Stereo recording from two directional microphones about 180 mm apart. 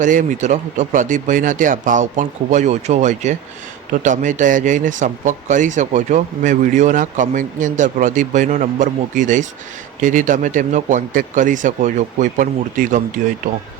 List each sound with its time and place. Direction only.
0.0 s speech: 45° right (ahead or behind)